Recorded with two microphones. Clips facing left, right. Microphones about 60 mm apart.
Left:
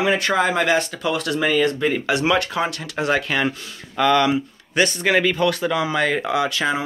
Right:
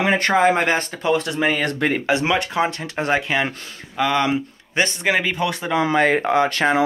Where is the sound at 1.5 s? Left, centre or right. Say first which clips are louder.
Left 2 dB; right.